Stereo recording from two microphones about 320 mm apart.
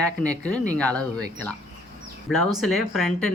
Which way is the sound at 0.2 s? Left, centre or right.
Centre.